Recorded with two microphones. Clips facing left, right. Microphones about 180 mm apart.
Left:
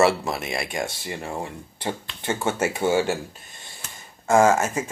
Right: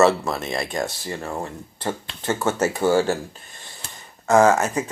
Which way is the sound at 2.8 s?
25° left (ahead or behind).